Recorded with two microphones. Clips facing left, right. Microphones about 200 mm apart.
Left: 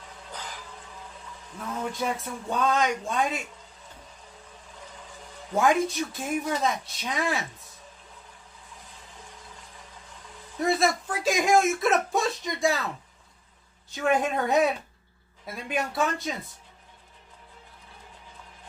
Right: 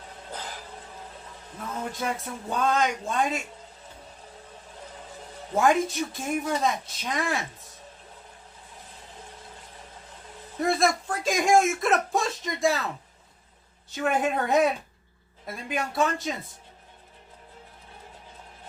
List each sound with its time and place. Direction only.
0.3 s a sound: 40° right (ahead or behind)
1.9 s speech: centre (ahead or behind)
5.5 s speech: centre (ahead or behind)
10.6 s a sound: centre (ahead or behind)
13.9 s speech: centre (ahead or behind)
15.7 s speech: centre (ahead or behind)